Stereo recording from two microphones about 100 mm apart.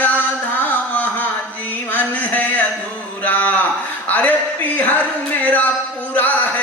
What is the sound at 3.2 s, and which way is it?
Speech, 15° left (ahead or behind).